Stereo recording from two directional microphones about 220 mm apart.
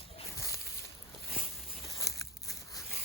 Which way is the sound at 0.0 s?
25° left (ahead or behind).